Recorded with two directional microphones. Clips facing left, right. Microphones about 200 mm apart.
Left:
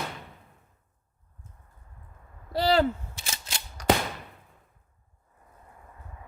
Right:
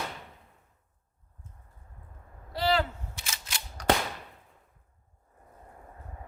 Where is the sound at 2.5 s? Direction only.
35° left (ahead or behind).